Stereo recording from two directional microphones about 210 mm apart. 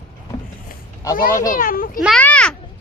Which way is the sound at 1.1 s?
45° left (ahead or behind).